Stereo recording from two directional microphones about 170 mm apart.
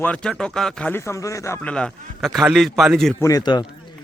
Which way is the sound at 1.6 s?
5° left (ahead or behind).